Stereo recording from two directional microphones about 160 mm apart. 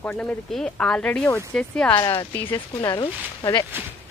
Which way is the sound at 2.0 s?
20° left (ahead or behind).